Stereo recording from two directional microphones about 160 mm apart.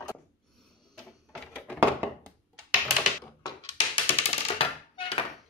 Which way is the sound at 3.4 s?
30° left (ahead or behind).